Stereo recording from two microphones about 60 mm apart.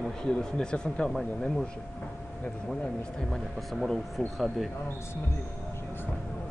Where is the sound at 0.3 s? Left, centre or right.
Centre.